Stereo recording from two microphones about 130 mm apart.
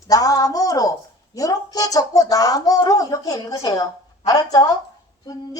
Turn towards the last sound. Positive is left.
turn(degrees=30)  # may be behind; listen again after turning